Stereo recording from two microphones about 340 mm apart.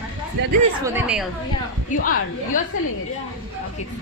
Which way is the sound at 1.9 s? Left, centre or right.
Left.